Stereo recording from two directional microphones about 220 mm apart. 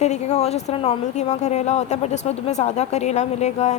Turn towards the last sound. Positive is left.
turn(degrees=30)  # may be behind; listen again after turning